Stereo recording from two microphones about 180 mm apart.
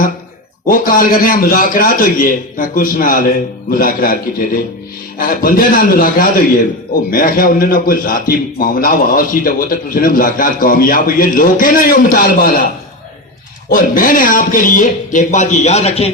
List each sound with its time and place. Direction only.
0.7 s a man's voice: 50° left (ahead or behind)
13.7 s a man's voice: 50° left (ahead or behind)